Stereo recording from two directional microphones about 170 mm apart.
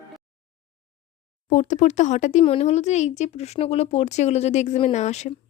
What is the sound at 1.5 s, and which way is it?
Speech, 45° left (ahead or behind).